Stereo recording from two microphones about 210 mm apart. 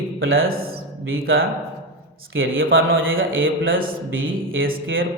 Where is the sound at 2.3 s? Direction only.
70° right (ahead or behind).